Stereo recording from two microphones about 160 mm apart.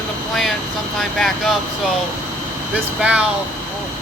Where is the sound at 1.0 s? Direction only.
Centre (ahead or behind).